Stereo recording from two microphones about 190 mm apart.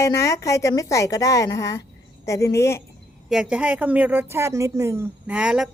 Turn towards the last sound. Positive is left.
turn(degrees=-5)  # may be behind; listen again after turning